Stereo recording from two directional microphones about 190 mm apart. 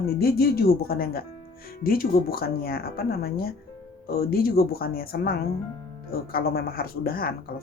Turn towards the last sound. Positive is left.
turn(degrees=50)  # may be behind; listen again after turning